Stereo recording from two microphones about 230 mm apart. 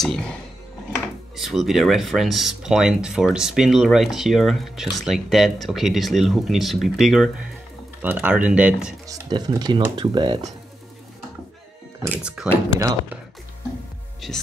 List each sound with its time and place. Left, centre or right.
1.3 s speech: centre
9.0 s speech: centre
12.0 s speech: centre